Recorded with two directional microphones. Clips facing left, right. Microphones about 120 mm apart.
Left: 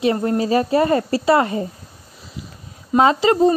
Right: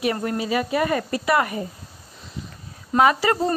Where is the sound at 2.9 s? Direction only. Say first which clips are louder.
Left 4 dB; 25° left (ahead or behind).